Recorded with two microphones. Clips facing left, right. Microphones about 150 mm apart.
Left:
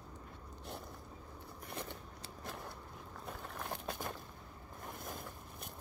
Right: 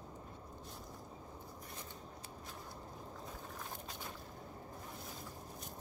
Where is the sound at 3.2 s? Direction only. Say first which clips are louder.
Left 8 dB; 65° left (ahead or behind).